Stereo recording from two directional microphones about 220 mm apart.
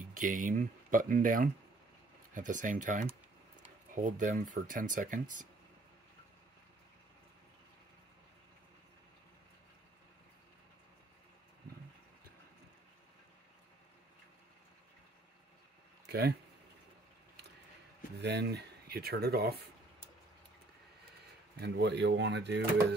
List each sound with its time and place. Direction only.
0.1 s speech: 35° right (ahead or behind)
16.1 s speech: 45° right (ahead or behind)
18.2 s speech: 50° right (ahead or behind)
21.5 s speech: 45° right (ahead or behind)